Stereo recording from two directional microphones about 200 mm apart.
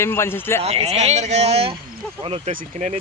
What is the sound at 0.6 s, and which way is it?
Speech, 30° right (ahead or behind).